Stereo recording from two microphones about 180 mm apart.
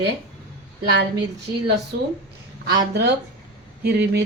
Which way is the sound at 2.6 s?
65° right (ahead or behind).